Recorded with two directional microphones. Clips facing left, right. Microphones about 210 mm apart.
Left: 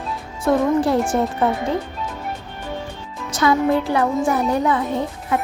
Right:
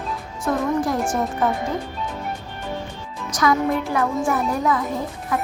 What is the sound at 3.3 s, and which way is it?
A woman's voice, 30° left (ahead or behind).